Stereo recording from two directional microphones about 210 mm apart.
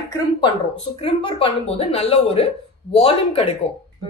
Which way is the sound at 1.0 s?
25° left (ahead or behind).